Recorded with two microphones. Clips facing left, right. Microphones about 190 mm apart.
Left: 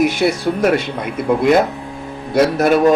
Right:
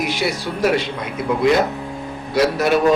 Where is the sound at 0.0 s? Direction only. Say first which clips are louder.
Left 7 dB; 50° left (ahead or behind).